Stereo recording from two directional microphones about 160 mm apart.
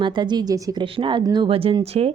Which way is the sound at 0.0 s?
30° right (ahead or behind).